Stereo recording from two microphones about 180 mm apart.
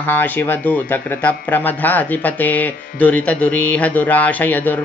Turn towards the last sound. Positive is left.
turn(degrees=10)  # may be behind; listen again after turning